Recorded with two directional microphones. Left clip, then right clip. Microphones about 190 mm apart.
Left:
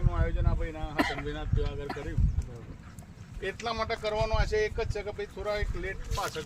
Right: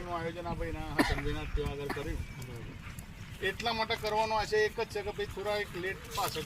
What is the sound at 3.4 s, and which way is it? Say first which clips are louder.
Speech: even; 10° left (ahead or behind).